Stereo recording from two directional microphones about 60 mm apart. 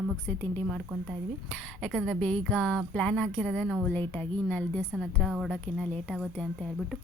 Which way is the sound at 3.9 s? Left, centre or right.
Left.